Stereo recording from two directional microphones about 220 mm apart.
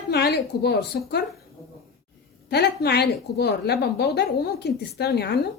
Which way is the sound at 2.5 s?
50° left (ahead or behind).